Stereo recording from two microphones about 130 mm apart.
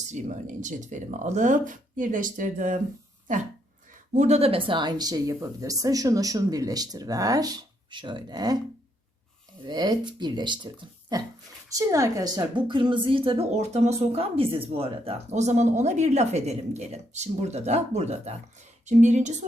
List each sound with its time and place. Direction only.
0.1 s speech: 70° right (ahead or behind)
4.1 s speech: 60° right (ahead or behind); by 8.5 s 30° right (ahead or behind)
9.6 s speech: 30° right (ahead or behind)
11.7 s a woman's voice: 25° right (ahead or behind); by 19.5 s 65° right (ahead or behind)